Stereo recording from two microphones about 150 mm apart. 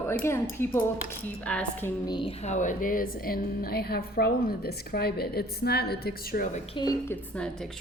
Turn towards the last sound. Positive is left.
turn(degrees=10)  # may be behind; listen again after turning